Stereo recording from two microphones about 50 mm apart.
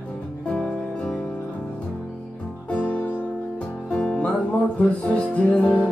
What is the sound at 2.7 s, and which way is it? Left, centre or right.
Music, left.